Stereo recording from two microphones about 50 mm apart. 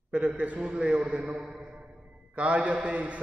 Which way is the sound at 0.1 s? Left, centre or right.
Right.